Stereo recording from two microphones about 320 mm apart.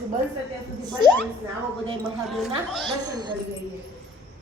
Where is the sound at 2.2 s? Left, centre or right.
Centre.